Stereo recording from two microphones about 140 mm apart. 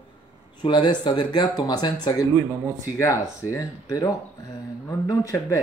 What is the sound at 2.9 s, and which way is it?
Speech, 20° left (ahead or behind).